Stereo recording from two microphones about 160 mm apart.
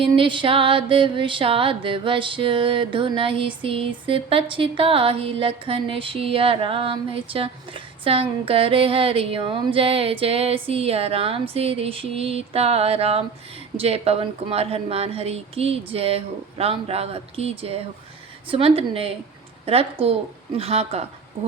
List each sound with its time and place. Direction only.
0.0 s music: 30° right (ahead or behind)